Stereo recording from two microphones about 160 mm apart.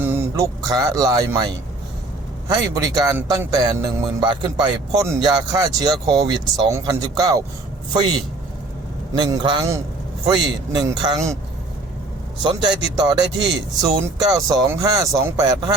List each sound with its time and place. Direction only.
0.0 s a man's voice: 15° right (ahead or behind)
9.1 s a man's voice: 25° right (ahead or behind)
12.4 s a man's voice: 30° right (ahead or behind)